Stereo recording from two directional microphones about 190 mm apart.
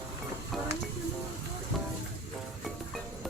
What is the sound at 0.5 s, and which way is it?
Music, centre (ahead or behind).